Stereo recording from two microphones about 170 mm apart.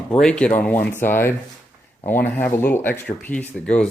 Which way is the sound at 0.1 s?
5° left (ahead or behind).